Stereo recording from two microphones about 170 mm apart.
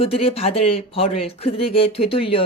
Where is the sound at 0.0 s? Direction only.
35° left (ahead or behind).